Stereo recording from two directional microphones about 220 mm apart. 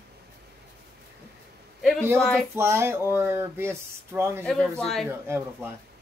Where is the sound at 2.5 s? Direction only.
10° right (ahead or behind).